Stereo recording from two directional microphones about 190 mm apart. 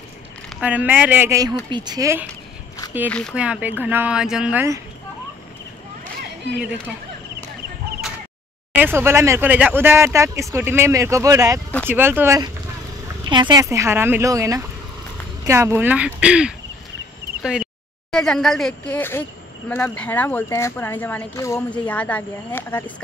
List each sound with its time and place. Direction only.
0.6 s speech: 10° right (ahead or behind)
3.1 s a woman's voice: 5° left (ahead or behind)
3.3 s speech: 5° right (ahead or behind)
8.7 s speech: 10° right (ahead or behind)
17.4 s a sound: 5° right (ahead or behind)
18.1 s a woman's voice: 5° left (ahead or behind)